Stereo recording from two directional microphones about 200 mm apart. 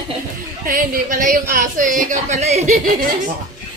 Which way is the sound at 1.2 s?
45° right (ahead or behind).